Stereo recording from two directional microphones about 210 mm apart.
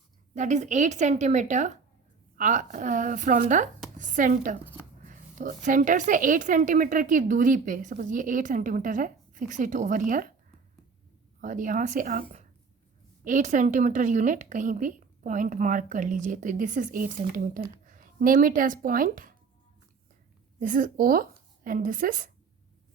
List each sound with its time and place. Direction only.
0.3 s a woman's voice: 35° right (ahead or behind)
11.3 s a woman's voice: 40° right (ahead or behind)
20.6 s a woman's voice: 40° right (ahead or behind)